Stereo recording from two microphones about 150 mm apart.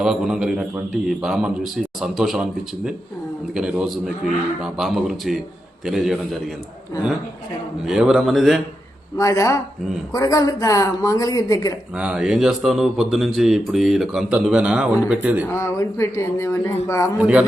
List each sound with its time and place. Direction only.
0.0 s speech: 5° right (ahead or behind)
7.9 s speech: 5° right (ahead or behind)
9.1 s a woman's voice: 20° left (ahead or behind)
11.9 s speech: 5° right (ahead or behind)
15.4 s a woman's voice: 20° left (ahead or behind)
17.2 s speech: 10° right (ahead or behind)